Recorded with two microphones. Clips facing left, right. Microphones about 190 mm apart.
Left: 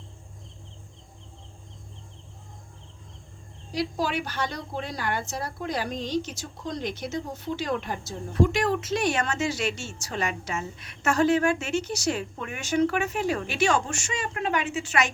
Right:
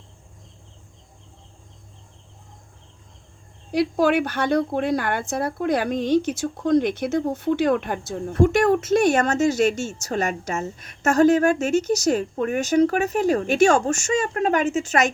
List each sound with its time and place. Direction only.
3.7 s speech: 60° right (ahead or behind)